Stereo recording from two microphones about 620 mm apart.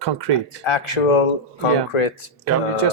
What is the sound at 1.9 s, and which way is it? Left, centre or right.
Speech, left.